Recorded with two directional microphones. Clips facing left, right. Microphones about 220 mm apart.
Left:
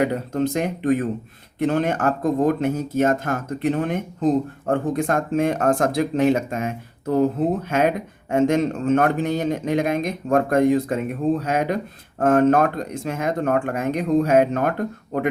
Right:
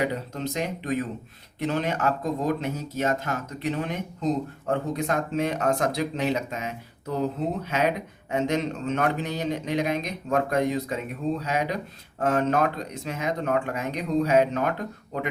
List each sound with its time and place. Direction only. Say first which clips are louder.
0.0 s speech: left 7 dB; 50° left (ahead or behind)